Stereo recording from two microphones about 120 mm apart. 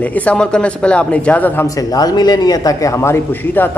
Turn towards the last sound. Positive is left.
turn(degrees=15)  # may be behind; listen again after turning